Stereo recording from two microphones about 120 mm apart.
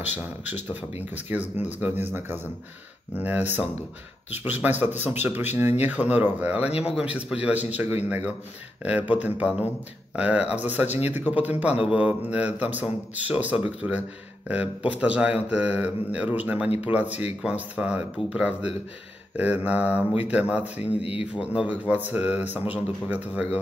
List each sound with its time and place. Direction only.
0.1 s speech: 15° right (ahead or behind)
20.8 s speech: 50° left (ahead or behind)
21.3 s speech: 10° right (ahead or behind)